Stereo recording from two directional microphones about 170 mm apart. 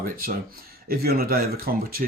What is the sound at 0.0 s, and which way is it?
Speech, 55° right (ahead or behind).